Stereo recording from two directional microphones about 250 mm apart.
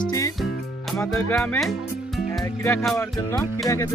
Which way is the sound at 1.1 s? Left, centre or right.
Centre.